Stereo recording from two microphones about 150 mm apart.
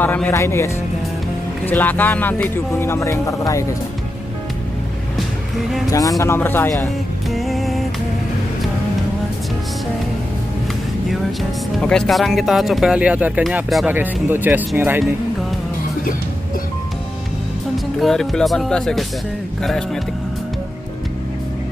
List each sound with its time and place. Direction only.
0.0 s speech: 10° left (ahead or behind)
1.7 s speech: 10° left (ahead or behind)
5.9 s speech: 25° left (ahead or behind)
7.2 s music: centre (ahead or behind)
11.8 s speech: 5° left (ahead or behind); by 15.0 s 15° right (ahead or behind)
18.0 s speech: centre (ahead or behind)